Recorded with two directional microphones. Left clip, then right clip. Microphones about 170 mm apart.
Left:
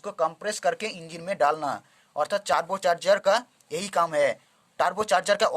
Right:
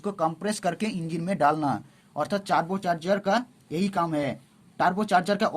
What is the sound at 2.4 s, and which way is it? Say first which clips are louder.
Speech: left 1 dB; 40° left (ahead or behind).